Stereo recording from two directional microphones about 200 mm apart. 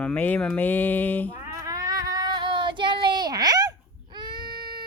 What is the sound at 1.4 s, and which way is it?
Child singing, 15° right (ahead or behind).